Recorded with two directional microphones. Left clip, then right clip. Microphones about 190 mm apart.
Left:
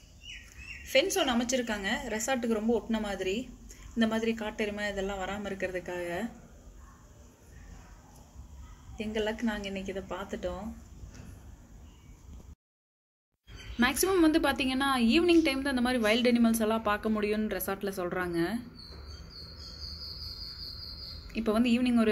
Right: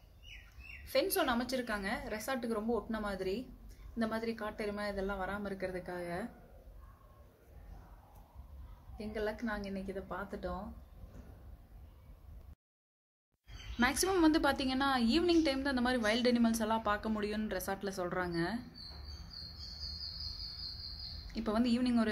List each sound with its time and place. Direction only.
1.1 s a woman's voice: 10° right (ahead or behind)
8.9 s a woman's voice: 5° right (ahead or behind)
13.7 s a woman's voice: 5° right (ahead or behind)
21.3 s a woman's voice: 5° right (ahead or behind)